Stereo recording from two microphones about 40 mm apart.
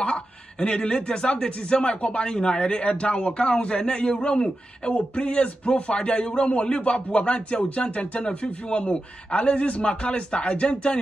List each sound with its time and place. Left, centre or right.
0.0 s speech: left
8.2 s speech: left